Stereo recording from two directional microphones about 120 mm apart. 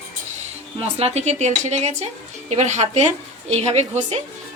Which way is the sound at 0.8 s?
65° right (ahead or behind).